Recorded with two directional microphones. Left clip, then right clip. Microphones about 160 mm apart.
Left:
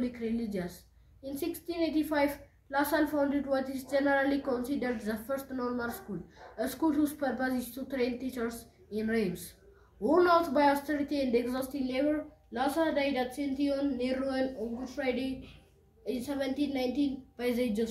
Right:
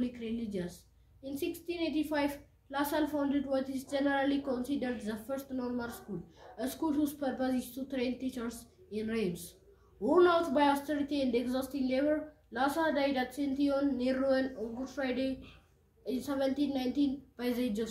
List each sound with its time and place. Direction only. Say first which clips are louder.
0.0 s a woman's voice: left 3 dB; 15° right (ahead or behind)